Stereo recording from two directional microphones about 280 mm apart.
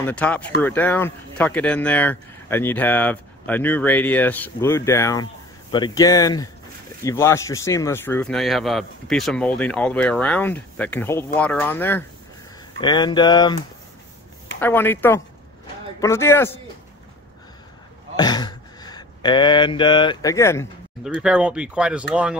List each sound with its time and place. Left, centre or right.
0.0 s speech: centre
14.6 s speech: centre
18.1 s mantra: centre
21.2 s speech: centre